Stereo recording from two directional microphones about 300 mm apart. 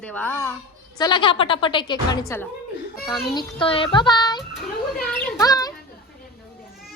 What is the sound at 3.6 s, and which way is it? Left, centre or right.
Speech, centre.